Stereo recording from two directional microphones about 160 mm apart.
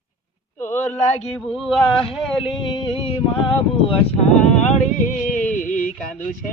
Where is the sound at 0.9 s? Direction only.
45° left (ahead or behind).